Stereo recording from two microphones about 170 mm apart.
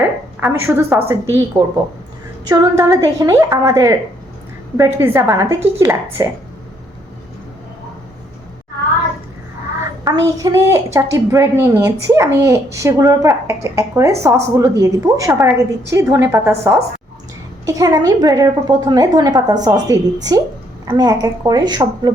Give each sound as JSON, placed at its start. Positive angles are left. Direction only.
{"t": 0.0, "sound": "a woman's voice", "side_deg": -10}
{"t": 2.5, "sound": "a woman's voice", "side_deg": -20}
{"t": 10.0, "sound": "a woman's voice", "side_deg": -20}